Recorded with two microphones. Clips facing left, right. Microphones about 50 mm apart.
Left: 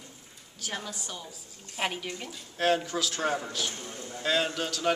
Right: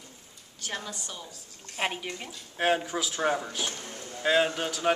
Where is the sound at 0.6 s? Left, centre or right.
Centre.